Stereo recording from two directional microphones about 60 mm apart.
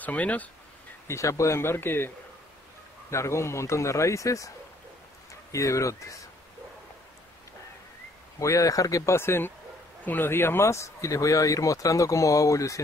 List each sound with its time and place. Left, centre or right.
0.0 s speech: left
1.0 s speech: left
3.1 s speech: left
5.5 s speech: left
8.4 s speech: left
9.1 s speech: left